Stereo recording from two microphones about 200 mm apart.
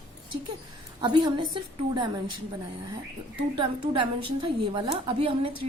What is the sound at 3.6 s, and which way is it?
A woman's voice, 25° right (ahead or behind).